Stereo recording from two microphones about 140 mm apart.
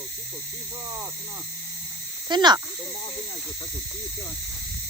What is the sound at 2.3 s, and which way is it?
Speech, 30° right (ahead or behind).